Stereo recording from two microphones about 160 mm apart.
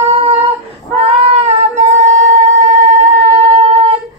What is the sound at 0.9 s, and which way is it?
Female singing, 40° right (ahead or behind).